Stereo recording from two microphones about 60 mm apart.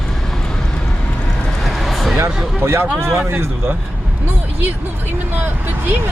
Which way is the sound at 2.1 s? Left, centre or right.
Right.